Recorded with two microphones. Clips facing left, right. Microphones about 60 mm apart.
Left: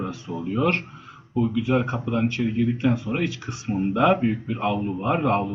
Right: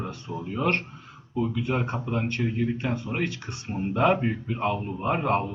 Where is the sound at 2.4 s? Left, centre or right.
Centre.